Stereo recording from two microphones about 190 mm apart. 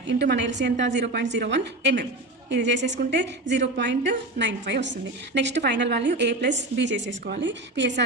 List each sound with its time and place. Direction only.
0.1 s a woman's voice: 65° right (ahead or behind)